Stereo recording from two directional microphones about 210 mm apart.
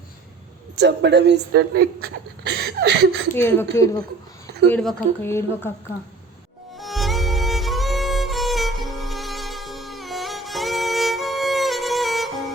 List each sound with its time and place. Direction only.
0.8 s speech: 55° right (ahead or behind)
3.3 s speech: 10° left (ahead or behind)
6.7 s music: centre (ahead or behind)